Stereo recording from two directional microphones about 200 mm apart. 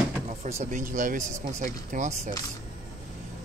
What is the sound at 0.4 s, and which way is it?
Speech, 35° right (ahead or behind).